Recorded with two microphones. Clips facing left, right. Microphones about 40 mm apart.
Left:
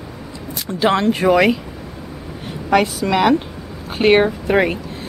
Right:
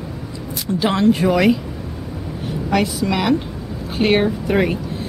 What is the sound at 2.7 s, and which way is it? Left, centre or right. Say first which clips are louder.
Speech: left 4 dB; centre.